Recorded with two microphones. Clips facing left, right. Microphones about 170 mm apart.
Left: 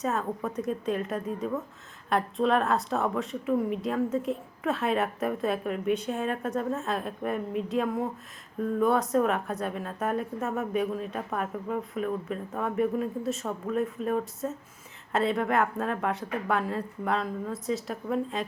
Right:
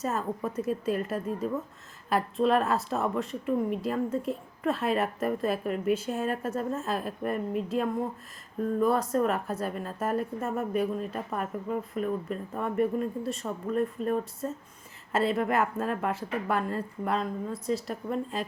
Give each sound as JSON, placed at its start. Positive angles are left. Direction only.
{"t": 0.0, "sound": "a woman's voice", "side_deg": 0}